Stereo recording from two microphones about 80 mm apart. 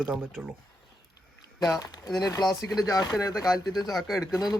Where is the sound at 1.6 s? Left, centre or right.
Left.